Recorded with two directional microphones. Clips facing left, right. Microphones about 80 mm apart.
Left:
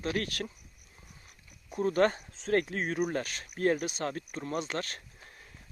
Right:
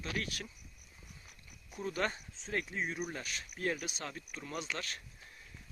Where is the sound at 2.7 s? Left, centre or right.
Left.